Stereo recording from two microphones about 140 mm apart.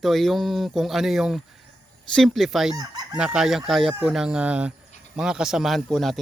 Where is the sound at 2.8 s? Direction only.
30° right (ahead or behind).